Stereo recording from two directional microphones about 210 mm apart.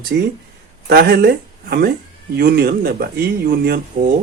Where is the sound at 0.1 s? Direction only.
50° right (ahead or behind).